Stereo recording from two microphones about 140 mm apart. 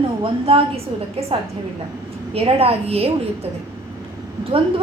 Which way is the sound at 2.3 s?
45° right (ahead or behind).